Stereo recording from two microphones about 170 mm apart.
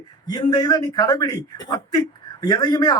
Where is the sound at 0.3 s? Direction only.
25° left (ahead or behind).